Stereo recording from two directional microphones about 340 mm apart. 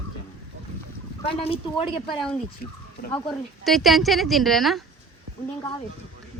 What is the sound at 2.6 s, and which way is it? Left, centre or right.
Speech, left.